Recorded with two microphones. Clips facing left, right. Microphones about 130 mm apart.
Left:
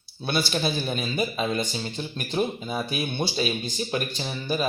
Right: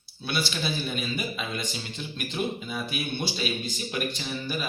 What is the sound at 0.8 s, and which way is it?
Speech, 35° left (ahead or behind).